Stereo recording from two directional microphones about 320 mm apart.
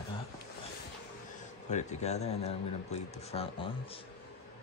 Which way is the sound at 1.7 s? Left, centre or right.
Left.